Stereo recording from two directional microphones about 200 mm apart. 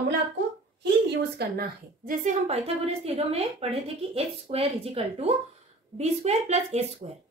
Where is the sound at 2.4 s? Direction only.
30° right (ahead or behind).